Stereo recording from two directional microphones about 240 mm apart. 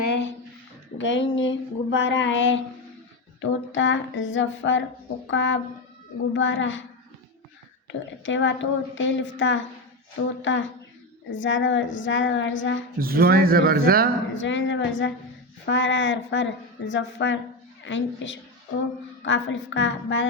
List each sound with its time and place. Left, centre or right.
0.1 s a sound: left
0.9 s speech: left
8.2 s speech: left
13.0 s speech: right
14.3 s speech: left